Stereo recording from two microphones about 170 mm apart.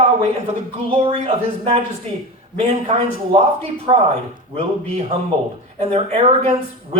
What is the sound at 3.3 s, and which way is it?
Speech, 35° right (ahead or behind).